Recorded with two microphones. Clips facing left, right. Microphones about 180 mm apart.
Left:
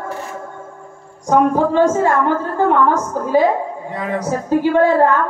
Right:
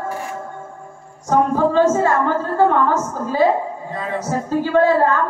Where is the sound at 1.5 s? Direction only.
15° left (ahead or behind).